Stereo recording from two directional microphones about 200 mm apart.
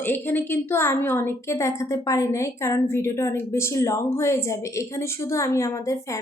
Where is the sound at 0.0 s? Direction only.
10° left (ahead or behind).